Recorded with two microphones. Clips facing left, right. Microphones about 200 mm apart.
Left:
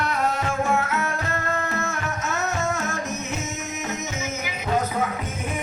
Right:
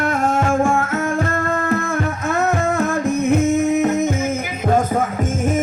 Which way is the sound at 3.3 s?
55° right (ahead or behind).